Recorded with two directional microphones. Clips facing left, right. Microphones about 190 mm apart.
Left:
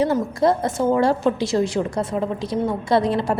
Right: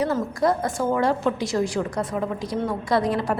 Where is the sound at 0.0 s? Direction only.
25° left (ahead or behind).